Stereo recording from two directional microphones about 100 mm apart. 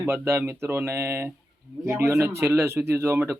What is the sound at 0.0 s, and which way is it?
Speech, 25° right (ahead or behind).